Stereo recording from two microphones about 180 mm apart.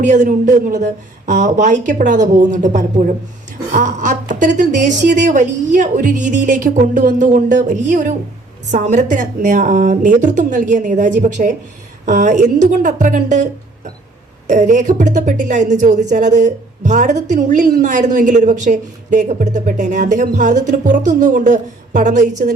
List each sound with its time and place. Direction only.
0.0 s a woman's voice: 45° right (ahead or behind)